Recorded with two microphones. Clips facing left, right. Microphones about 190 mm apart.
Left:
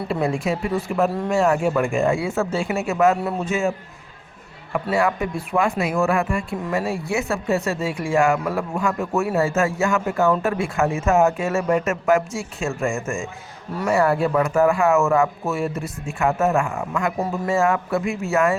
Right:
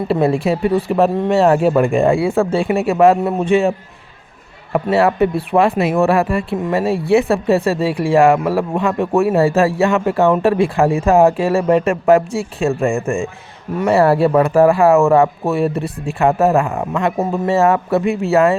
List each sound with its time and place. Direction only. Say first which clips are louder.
0.1 s a man's voice: right 7 dB; 30° right (ahead or behind)
4.9 s speech: right 7 dB; 35° right (ahead or behind)